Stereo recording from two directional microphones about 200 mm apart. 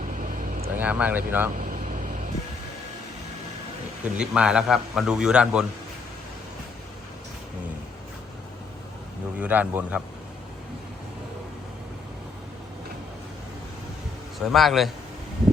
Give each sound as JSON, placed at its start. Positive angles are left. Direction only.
{"t": 0.0, "sound": "vehicle", "side_deg": -40}
{"t": 0.8, "sound": "speech", "side_deg": -5}
{"t": 1.5, "sound": "a sound", "side_deg": -40}
{"t": 4.0, "sound": "a man's voice", "side_deg": -5}
{"t": 9.4, "sound": "speech", "side_deg": -10}
{"t": 14.4, "sound": "a man's voice", "side_deg": 0}